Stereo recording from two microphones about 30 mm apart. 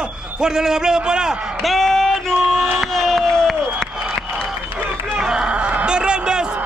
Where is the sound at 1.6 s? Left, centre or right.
Centre.